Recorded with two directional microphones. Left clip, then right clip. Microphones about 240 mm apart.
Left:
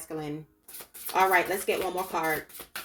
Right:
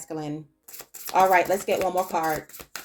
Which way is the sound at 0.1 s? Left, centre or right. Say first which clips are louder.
Right 3 dB; right.